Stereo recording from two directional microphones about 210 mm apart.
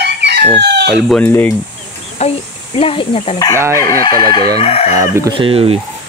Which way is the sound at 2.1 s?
30° left (ahead or behind).